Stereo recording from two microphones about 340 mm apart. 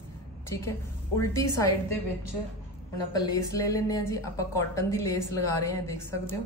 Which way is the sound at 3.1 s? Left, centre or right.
Centre.